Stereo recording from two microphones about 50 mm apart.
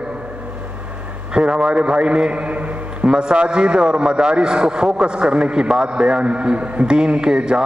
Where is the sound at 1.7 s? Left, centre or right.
Right.